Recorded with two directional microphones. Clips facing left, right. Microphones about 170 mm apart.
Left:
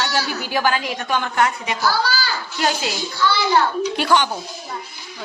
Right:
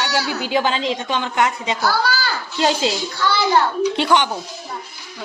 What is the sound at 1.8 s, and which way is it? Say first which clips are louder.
Speech: even; 60° right (ahead or behind).